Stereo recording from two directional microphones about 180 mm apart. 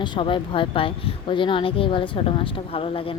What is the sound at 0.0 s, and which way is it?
A woman's voice, 25° left (ahead or behind).